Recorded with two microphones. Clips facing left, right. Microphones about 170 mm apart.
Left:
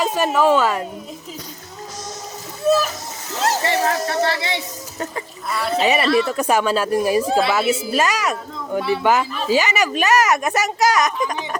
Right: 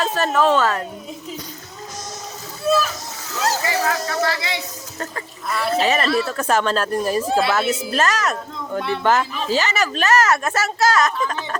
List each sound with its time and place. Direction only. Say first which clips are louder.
0.0 s speech: left 1 dB; 10° left (ahead or behind)
3.3 s speech: left 2 dB; 25° left (ahead or behind)
5.5 s speech: right 1 dB; centre (ahead or behind)
5.8 s speech: left 4 dB; 15° left (ahead or behind)
7.3 s speech: left 1 dB; centre (ahead or behind); by 11.4 s 15° left (ahead or behind)